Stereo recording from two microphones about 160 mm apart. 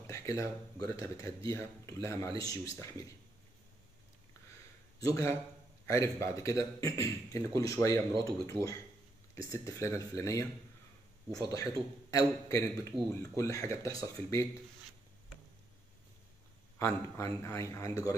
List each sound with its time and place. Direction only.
0.0 s a man's voice: 20° left (ahead or behind)
5.0 s a man's voice: 20° left (ahead or behind)
16.7 s a man's voice: 15° left (ahead or behind)